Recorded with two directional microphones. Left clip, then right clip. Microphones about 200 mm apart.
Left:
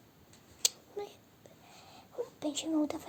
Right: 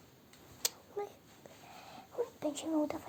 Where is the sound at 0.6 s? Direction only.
10° left (ahead or behind).